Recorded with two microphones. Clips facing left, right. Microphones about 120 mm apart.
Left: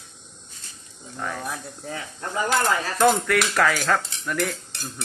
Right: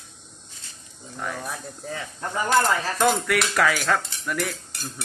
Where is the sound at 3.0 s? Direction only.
Centre (ahead or behind).